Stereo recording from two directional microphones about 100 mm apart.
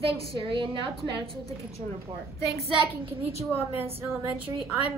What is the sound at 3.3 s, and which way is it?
Speech, 20° right (ahead or behind).